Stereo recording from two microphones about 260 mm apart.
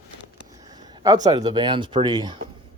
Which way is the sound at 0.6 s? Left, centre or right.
Centre.